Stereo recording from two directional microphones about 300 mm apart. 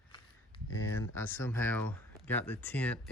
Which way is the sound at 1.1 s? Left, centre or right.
Centre.